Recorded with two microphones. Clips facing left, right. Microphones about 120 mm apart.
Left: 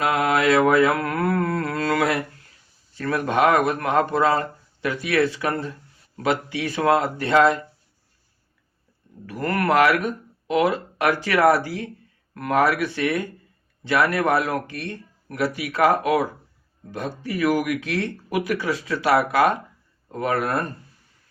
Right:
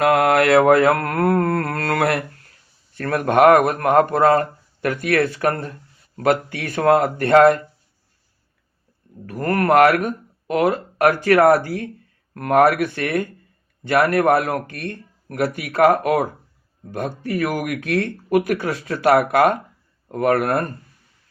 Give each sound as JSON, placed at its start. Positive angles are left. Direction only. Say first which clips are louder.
{"t": 0.0, "sound": "a sound", "louder": "right 5 dB", "side_deg": -65}
{"t": 2.9, "sound": "a man's voice", "louder": "right 4 dB", "side_deg": -55}
{"t": 9.2, "sound": "a man's voice", "louder": "right 3 dB", "side_deg": -45}